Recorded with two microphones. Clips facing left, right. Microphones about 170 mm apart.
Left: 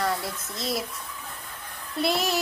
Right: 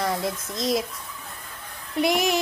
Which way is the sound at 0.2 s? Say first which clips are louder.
Right 6 dB; 15° right (ahead or behind).